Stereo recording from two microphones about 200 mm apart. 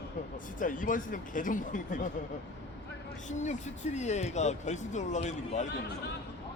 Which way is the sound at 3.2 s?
35° left (ahead or behind).